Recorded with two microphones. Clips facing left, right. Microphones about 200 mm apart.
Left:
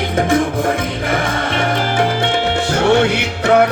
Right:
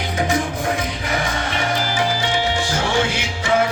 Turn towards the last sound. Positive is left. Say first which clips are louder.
# left 6 dB
turn(degrees=65)  # may be behind; listen again after turning